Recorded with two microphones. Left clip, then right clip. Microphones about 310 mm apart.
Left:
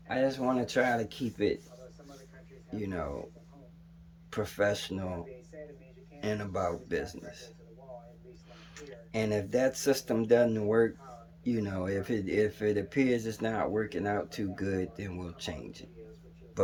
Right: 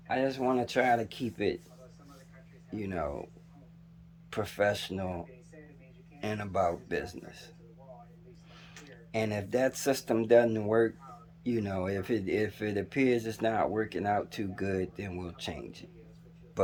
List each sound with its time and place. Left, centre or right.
0.1 s speech: centre
2.7 s speech: centre
4.3 s speech: centre
6.1 s speech: centre
8.7 s speech: centre